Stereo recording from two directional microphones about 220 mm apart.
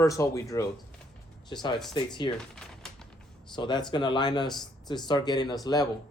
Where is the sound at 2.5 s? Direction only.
Centre (ahead or behind).